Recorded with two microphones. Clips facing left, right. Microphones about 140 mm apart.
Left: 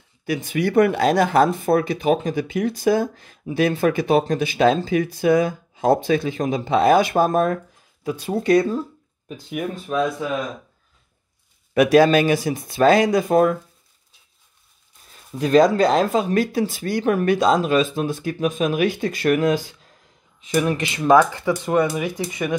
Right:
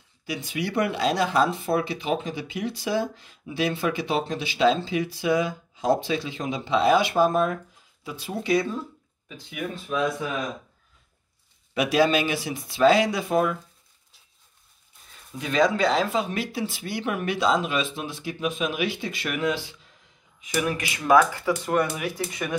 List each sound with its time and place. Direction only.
0.3 s speech: 50° left (ahead or behind)
11.7 s speech: 50° left (ahead or behind)
15.3 s speech: 40° left (ahead or behind)
20.4 s speech: 25° left (ahead or behind)